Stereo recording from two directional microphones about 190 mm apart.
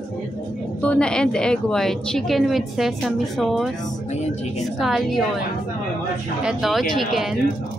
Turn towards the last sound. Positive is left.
turn(degrees=0)  # may be behind; listen again after turning